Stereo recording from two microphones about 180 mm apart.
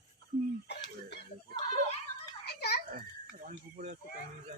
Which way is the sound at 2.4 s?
65° left (ahead or behind).